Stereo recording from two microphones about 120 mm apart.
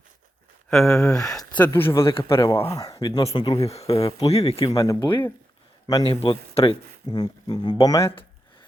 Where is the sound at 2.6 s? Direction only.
30° left (ahead or behind).